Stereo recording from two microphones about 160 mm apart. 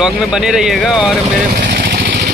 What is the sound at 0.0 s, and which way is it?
Speech, 5° right (ahead or behind).